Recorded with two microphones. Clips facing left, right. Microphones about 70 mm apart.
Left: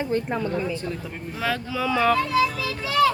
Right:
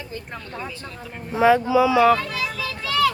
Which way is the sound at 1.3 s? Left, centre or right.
Right.